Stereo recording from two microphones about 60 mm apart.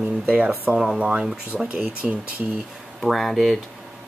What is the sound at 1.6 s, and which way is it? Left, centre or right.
Speech, right.